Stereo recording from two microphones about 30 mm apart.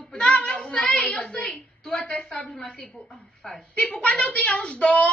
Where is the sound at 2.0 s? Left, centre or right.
Left.